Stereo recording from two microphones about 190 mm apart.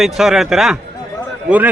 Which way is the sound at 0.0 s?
Centre (ahead or behind).